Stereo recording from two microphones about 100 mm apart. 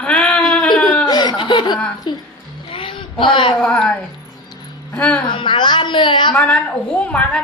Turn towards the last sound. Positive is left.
turn(degrees=10)  # may be behind; listen again after turning